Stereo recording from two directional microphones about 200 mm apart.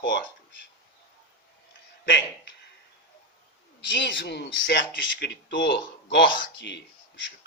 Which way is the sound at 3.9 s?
65° left (ahead or behind).